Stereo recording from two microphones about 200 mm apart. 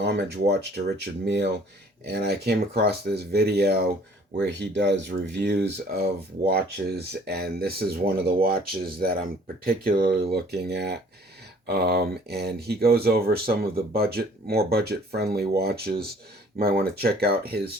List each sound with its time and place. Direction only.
0.0 s speech: 55° right (ahead or behind)
10.3 s speech: 55° right (ahead or behind)